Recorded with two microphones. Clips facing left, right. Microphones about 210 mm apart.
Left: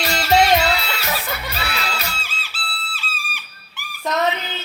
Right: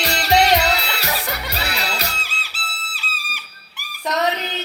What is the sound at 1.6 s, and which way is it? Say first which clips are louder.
Children shouting: right 2 dB; 40° right (ahead or behind).